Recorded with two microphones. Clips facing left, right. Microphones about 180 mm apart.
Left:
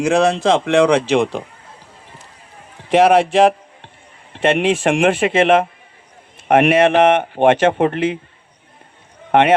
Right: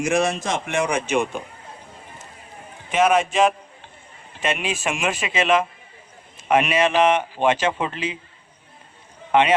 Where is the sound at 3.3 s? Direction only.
65° left (ahead or behind).